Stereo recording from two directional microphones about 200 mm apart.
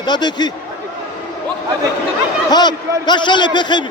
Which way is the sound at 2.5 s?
20° left (ahead or behind).